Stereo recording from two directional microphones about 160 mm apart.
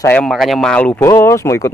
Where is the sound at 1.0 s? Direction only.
20° left (ahead or behind).